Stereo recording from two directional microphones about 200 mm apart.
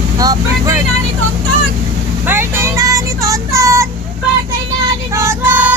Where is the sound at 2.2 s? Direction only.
10° right (ahead or behind).